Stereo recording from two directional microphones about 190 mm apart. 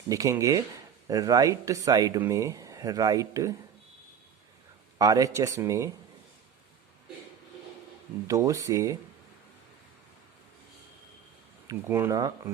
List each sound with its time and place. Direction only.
0.1 s speech: 15° right (ahead or behind)
4.9 s speech: 20° right (ahead or behind)
8.3 s speech: 15° right (ahead or behind)
11.7 s speech: 10° right (ahead or behind)